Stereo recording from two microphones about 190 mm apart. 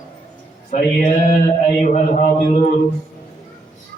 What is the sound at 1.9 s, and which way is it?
Speech, 35° left (ahead or behind).